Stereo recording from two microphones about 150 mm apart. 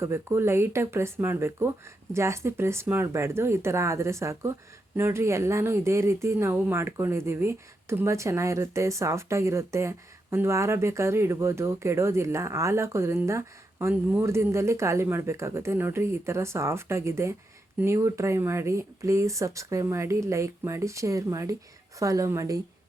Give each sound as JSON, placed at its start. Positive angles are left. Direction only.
{"t": 0.0, "sound": "speech", "side_deg": -20}